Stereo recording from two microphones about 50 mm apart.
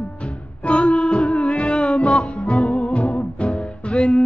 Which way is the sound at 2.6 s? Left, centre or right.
Left.